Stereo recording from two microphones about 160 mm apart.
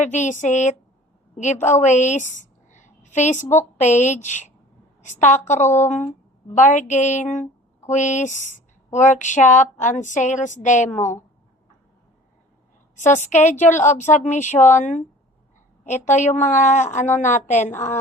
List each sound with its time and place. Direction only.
0.0 s a woman's voice: 50° left (ahead or behind)
3.4 s a woman's voice: 15° left (ahead or behind)
3.8 s speech: 50° left (ahead or behind)
13.1 s speech: 50° left (ahead or behind)